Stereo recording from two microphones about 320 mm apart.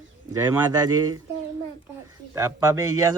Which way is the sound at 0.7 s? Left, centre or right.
Centre.